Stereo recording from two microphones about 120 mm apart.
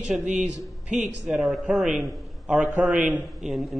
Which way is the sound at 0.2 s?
80° right.